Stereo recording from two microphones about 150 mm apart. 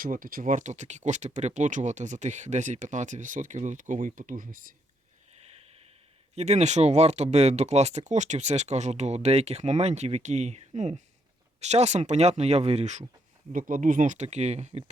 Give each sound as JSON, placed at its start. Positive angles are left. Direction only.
{"t": 0.0, "sound": "speech", "side_deg": -70}
{"t": 5.4, "sound": "a sound", "side_deg": -45}
{"t": 6.3, "sound": "speech", "side_deg": -45}
{"t": 13.5, "sound": "speech", "side_deg": -65}